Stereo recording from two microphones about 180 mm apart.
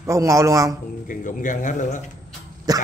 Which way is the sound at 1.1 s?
45° left (ahead or behind).